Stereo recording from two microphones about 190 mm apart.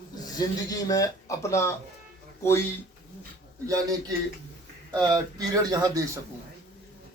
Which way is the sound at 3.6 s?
20° right (ahead or behind).